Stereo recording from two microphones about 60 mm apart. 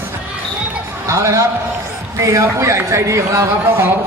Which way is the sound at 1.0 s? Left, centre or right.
Right.